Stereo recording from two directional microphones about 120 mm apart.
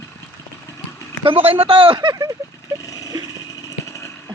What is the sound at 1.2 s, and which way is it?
Speech, 50° right (ahead or behind).